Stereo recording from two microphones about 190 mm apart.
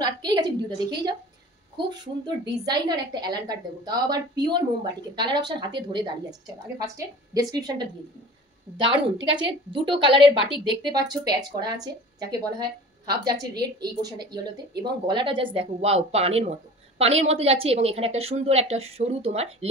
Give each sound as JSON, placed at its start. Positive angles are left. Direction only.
{"t": 0.0, "sound": "a woman's voice", "side_deg": -20}